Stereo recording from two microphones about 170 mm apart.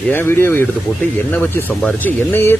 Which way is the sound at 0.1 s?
10° left (ahead or behind).